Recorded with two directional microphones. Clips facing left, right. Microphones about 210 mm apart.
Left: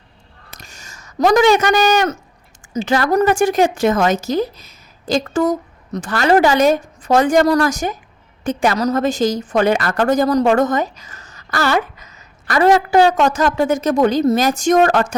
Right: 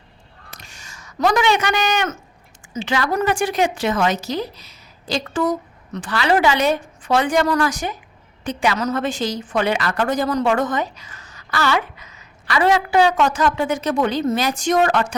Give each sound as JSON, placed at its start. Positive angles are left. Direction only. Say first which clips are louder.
{"t": 0.6, "sound": "a woman's voice", "louder": "left 2 dB", "side_deg": 40}